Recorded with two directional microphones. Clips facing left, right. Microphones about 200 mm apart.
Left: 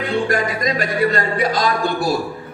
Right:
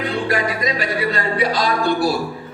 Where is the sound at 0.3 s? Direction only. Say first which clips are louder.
Left 1 dB; 50° left (ahead or behind).